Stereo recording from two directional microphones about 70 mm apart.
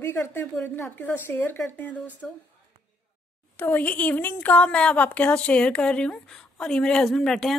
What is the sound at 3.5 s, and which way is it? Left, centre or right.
A woman's voice, left.